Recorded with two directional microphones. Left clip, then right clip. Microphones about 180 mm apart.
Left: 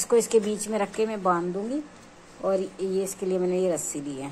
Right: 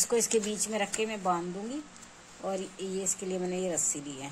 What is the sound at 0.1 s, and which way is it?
Speech, 20° right (ahead or behind).